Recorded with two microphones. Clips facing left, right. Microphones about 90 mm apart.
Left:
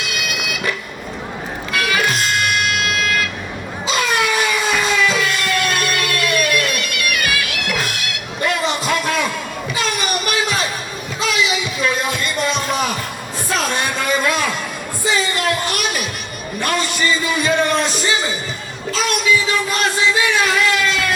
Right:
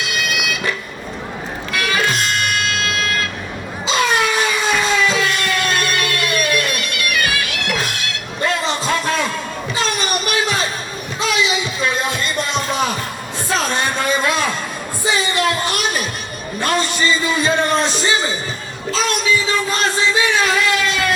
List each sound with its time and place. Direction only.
1.7 s music: 35° right (ahead or behind)
3.0 s vehicle: 35° right (ahead or behind)
3.8 s a sound: 30° right (ahead or behind)
9.7 s music: 30° right (ahead or behind)
15.2 s a sound: 25° right (ahead or behind)
18.9 s music: 30° right (ahead or behind)